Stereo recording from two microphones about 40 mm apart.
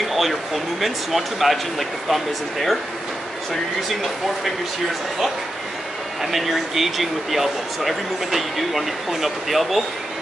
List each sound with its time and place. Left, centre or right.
0.1 s speech: centre
6.3 s speech: centre